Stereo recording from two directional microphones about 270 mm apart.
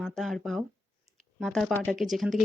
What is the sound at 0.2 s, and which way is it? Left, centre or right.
A woman's voice, centre.